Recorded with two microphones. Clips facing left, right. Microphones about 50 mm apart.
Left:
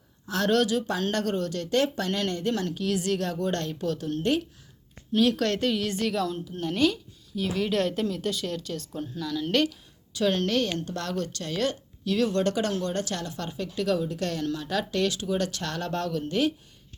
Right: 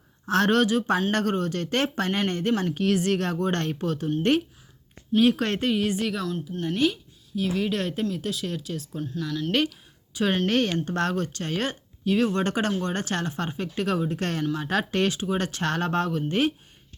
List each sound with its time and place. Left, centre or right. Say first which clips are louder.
0.3 s speech: right 3 dB; right
4.2 s speech: right 4 dB; right
5.2 s a woman's voice: right 1 dB; right; by 9.2 s centre
10.2 s a woman's voice: right 1 dB; right